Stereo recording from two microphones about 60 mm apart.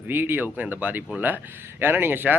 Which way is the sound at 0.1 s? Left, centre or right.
Right.